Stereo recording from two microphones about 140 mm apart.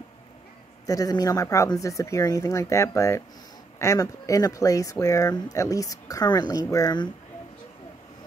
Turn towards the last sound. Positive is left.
turn(degrees=25)  # may be behind; listen again after turning